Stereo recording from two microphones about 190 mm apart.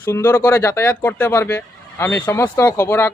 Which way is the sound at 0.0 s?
15° left (ahead or behind).